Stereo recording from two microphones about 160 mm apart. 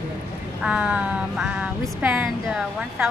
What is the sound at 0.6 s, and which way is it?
Music, 5° right (ahead or behind).